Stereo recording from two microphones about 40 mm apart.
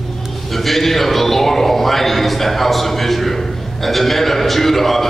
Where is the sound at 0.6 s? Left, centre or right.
Centre.